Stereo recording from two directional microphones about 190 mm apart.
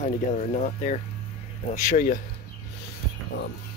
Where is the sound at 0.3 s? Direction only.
40° left (ahead or behind).